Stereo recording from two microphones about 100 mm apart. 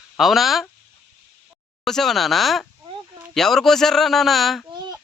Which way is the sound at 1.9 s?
5° left (ahead or behind).